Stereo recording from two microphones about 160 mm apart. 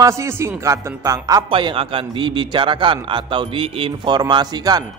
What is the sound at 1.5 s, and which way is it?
A man's voice, 35° right (ahead or behind).